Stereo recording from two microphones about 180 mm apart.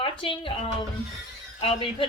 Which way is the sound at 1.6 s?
30° left (ahead or behind).